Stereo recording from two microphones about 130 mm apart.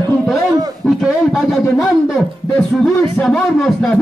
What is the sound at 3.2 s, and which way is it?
Speech, centre (ahead or behind).